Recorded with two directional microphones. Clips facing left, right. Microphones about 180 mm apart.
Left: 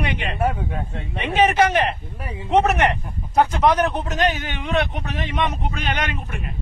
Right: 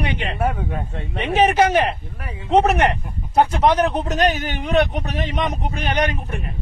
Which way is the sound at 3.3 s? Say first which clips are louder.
Right 1 dB; 30° right (ahead or behind).